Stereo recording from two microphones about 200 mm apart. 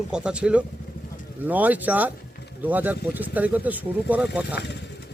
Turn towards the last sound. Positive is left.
turn(degrees=55)  # may be behind; listen again after turning